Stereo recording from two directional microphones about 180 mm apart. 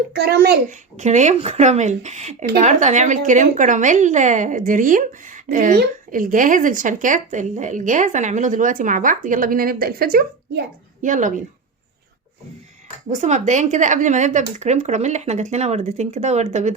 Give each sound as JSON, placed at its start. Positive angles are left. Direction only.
{"t": 0.1, "sound": "a child's voice", "side_deg": -65}
{"t": 0.7, "sound": "a woman's voice", "side_deg": -40}
{"t": 11.0, "sound": "a woman's voice", "side_deg": -45}
{"t": 13.1, "sound": "a woman's voice", "side_deg": -40}